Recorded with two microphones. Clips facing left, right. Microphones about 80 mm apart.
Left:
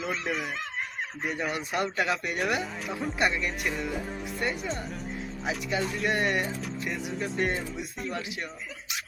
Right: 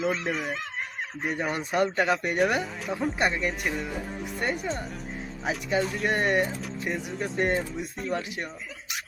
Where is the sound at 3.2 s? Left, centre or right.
Right.